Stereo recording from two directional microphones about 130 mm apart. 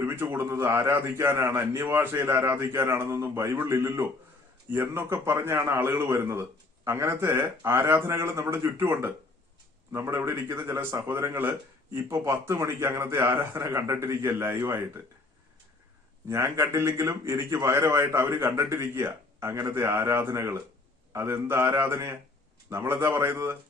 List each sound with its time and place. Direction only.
0.0 s a man's voice: 20° right (ahead or behind)
16.3 s speech: 20° right (ahead or behind)